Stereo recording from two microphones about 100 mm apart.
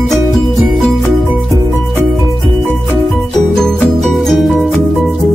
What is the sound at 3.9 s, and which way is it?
Music, centre (ahead or behind).